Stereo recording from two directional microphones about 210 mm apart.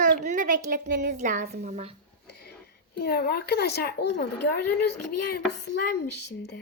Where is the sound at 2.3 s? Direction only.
50° left (ahead or behind).